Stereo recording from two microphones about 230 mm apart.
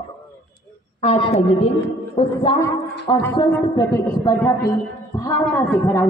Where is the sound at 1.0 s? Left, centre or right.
Left.